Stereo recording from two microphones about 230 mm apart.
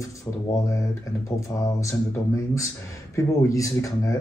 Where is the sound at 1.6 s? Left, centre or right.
Centre.